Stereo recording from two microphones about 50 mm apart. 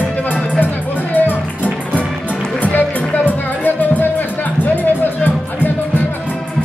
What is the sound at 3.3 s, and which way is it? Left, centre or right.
Music, left.